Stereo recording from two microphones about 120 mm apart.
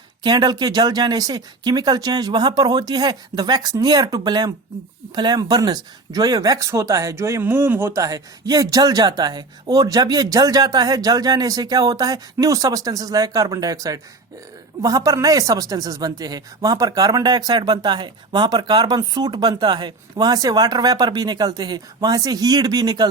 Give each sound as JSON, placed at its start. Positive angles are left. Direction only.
{"t": 0.2, "sound": "speech", "side_deg": -35}